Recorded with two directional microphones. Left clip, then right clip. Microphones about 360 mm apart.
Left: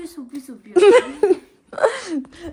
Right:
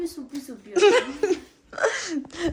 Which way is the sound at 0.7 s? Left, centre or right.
Centre.